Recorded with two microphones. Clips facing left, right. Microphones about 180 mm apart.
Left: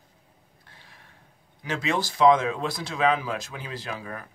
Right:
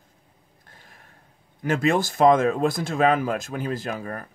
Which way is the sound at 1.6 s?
50° right (ahead or behind).